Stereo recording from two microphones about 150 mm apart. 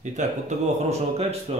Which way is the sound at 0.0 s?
55° right (ahead or behind).